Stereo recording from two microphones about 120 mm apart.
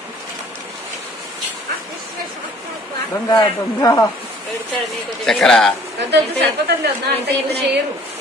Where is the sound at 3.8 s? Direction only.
30° left (ahead or behind).